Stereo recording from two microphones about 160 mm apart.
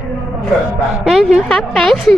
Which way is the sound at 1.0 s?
Centre (ahead or behind).